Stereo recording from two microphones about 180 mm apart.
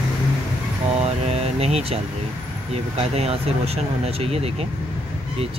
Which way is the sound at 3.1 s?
35° right (ahead or behind).